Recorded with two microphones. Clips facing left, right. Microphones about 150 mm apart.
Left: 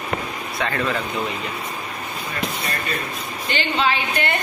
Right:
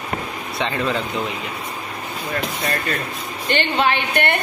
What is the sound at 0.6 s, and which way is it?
Speech, 20° right (ahead or behind).